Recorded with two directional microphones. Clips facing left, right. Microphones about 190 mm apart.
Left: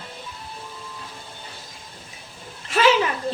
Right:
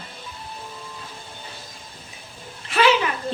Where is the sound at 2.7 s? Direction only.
40° left (ahead or behind).